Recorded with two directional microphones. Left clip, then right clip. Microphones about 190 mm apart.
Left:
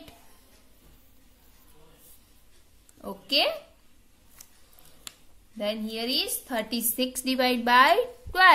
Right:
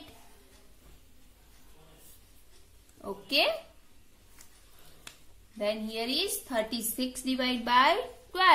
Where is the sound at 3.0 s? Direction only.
30° left (ahead or behind).